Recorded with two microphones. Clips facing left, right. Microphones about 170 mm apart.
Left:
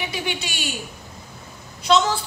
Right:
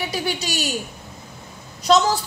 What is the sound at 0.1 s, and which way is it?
Speech, 40° right (ahead or behind).